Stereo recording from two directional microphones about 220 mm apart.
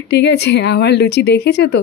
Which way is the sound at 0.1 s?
50° left (ahead or behind).